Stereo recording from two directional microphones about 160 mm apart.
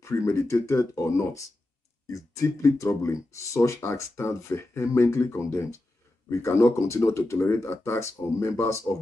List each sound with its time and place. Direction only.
0.0 s speech: 15° left (ahead or behind)